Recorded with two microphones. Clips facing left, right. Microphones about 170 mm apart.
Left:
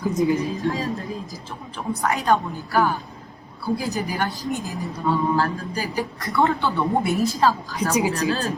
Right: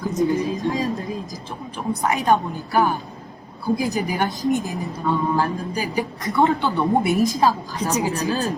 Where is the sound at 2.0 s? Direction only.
20° right (ahead or behind).